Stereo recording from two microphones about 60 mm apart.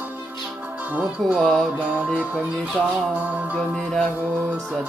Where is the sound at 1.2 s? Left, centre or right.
Centre.